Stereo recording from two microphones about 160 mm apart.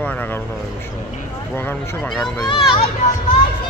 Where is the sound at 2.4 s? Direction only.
30° left (ahead or behind).